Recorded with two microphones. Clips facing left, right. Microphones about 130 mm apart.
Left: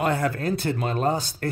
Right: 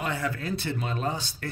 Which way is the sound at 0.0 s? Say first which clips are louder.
Left 7 dB; 50° left (ahead or behind).